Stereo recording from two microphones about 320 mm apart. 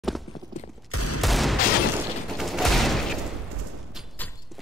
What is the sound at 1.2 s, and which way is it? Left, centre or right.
Fusillade, centre.